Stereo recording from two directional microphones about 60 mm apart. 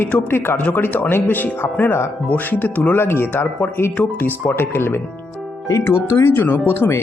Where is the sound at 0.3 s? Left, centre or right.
Left.